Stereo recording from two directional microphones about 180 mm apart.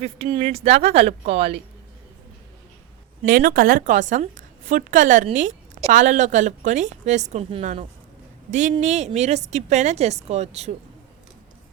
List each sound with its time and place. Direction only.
0.0 s a woman's voice: 30° right (ahead or behind)
3.2 s a woman's voice: 50° right (ahead or behind)